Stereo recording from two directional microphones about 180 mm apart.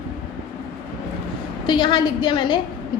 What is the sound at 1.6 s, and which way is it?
Speech, 25° left (ahead or behind).